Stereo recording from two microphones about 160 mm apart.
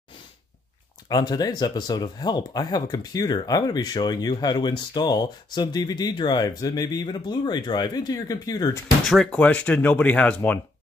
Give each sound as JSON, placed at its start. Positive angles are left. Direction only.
{"t": 1.0, "sound": "speech", "side_deg": 25}
{"t": 9.0, "sound": "speech", "side_deg": 0}